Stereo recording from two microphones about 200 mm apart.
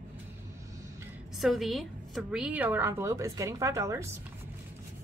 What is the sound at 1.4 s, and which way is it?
A woman's voice, centre (ahead or behind).